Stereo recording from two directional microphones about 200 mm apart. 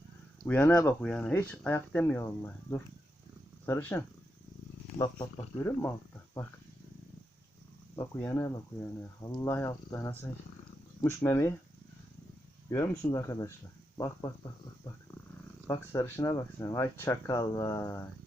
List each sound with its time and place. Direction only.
0.4 s speech: 5° left (ahead or behind)
7.9 s speech: 15° left (ahead or behind)
12.7 s speech: 15° left (ahead or behind)
15.6 s speech: 15° left (ahead or behind)